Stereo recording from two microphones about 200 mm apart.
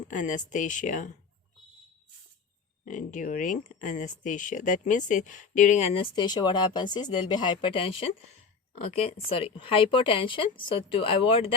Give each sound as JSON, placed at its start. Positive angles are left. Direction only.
{"t": 0.1, "sound": "speech", "side_deg": 40}
{"t": 2.8, "sound": "speech", "side_deg": 40}
{"t": 9.3, "sound": "speech", "side_deg": 25}